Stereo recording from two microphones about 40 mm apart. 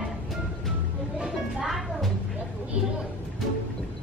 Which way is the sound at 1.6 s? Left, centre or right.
Centre.